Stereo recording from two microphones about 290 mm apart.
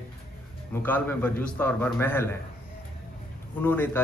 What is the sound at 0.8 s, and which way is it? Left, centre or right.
A man's voice, centre.